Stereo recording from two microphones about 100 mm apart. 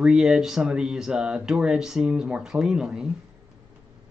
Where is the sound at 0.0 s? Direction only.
5° right (ahead or behind).